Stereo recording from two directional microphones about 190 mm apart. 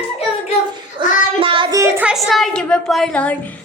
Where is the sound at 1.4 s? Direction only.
25° right (ahead or behind).